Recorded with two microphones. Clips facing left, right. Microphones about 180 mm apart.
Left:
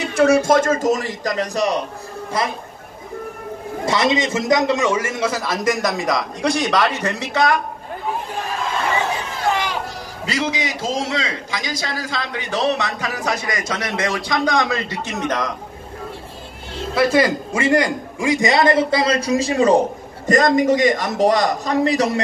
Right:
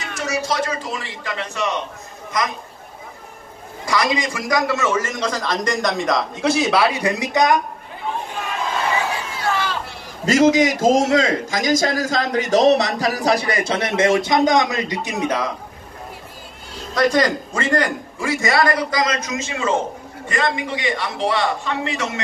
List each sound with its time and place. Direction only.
0.0 s a man's voice: 60° left (ahead or behind); by 2.5 s 30° left (ahead or behind)
3.8 s a man's voice: 25° left (ahead or behind); by 7.6 s 20° right (ahead or behind)
9.5 s a sound: 15° left (ahead or behind)
10.2 s a man's voice: 45° right (ahead or behind); by 15.5 s 10° right (ahead or behind)
16.9 s a man's voice: 10° left (ahead or behind); by 22.2 s 35° left (ahead or behind)